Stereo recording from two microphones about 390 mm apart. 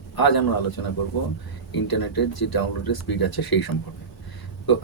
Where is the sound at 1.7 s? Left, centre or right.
Left.